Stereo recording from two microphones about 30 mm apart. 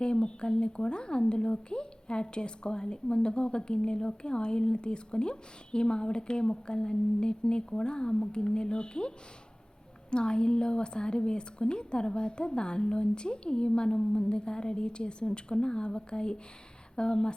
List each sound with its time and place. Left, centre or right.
0.0 s a woman's voice: left